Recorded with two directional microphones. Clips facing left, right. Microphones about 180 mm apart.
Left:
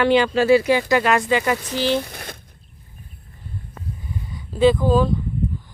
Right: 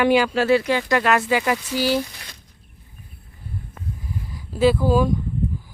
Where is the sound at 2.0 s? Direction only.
55° left (ahead or behind).